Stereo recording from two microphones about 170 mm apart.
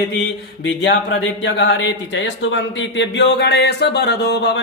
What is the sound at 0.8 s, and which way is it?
Speech, 90° left.